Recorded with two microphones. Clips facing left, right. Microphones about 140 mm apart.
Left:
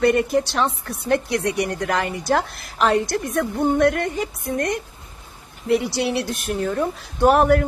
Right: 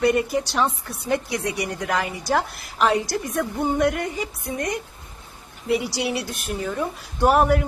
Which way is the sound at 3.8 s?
55° left (ahead or behind).